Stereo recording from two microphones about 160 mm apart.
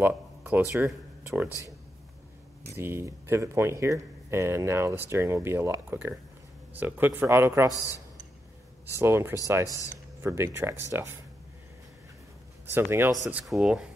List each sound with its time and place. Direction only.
0.0 s speech: 10° right (ahead or behind)
2.8 s speech: 15° right (ahead or behind)
8.8 s speech: 15° right (ahead or behind)
12.6 s speech: 15° right (ahead or behind)